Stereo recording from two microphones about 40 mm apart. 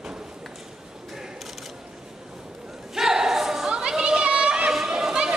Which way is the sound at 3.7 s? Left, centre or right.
Right.